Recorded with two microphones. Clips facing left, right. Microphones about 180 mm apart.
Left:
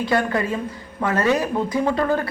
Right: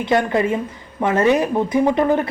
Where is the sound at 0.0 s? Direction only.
20° right (ahead or behind).